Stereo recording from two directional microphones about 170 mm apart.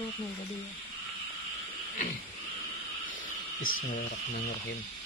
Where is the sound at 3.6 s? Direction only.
55° left (ahead or behind).